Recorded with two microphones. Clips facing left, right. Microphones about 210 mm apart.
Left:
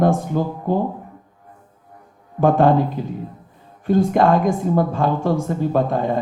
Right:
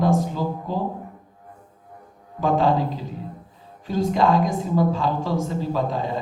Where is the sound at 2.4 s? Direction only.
55° left (ahead or behind).